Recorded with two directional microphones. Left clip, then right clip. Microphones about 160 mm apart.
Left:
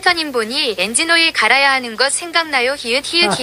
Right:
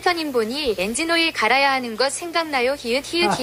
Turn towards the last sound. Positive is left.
turn(degrees=0)  # may be behind; listen again after turning